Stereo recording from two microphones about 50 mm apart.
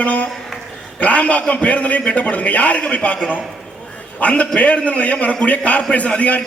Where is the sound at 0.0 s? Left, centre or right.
Left.